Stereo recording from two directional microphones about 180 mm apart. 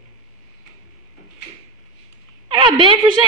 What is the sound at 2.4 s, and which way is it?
Speech, 30° right (ahead or behind).